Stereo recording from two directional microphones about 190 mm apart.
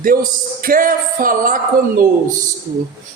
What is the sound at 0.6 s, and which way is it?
A man's voice, 45° right (ahead or behind).